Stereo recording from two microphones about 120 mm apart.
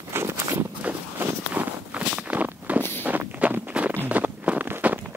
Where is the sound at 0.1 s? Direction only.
20° right (ahead or behind).